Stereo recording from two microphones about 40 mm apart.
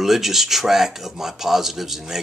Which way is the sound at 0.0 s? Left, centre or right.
Centre.